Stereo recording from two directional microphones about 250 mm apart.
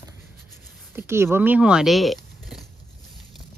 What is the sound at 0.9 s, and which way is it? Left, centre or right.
Speech, centre.